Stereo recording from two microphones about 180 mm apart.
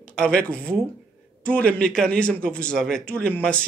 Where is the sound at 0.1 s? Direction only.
5° left (ahead or behind).